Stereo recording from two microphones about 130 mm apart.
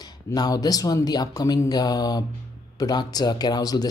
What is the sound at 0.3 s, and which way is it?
Speech, 30° left (ahead or behind).